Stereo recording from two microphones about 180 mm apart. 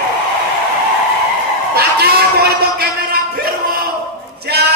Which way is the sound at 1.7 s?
60° right (ahead or behind).